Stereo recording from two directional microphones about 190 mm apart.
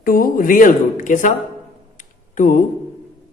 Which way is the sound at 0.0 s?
50° left (ahead or behind).